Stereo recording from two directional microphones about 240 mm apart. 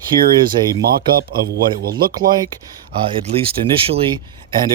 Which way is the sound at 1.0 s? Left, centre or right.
Right.